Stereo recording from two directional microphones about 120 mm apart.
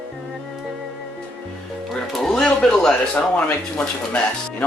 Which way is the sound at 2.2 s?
5° left (ahead or behind).